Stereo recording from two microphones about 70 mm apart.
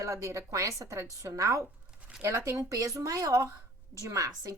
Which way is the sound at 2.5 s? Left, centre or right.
Right.